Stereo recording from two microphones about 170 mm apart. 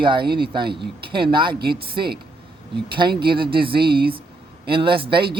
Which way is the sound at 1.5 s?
65° right (ahead or behind).